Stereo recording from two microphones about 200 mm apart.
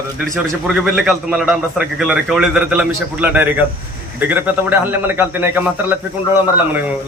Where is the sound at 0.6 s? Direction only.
5° right (ahead or behind).